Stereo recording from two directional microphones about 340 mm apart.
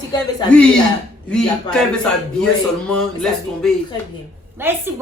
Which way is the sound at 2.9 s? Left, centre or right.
Centre.